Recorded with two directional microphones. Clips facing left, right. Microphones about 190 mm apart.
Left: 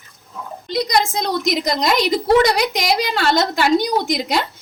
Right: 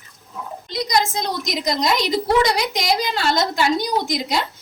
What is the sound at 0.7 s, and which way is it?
A woman's voice, 60° left (ahead or behind).